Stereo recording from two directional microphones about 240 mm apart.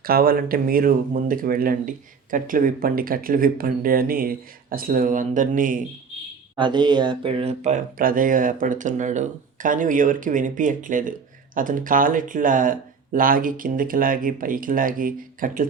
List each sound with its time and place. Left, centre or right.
0.0 s speech: right
6.6 s speech: centre; by 15.6 s right